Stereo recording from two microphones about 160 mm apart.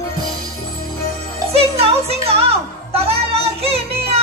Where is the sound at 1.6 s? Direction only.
40° right (ahead or behind).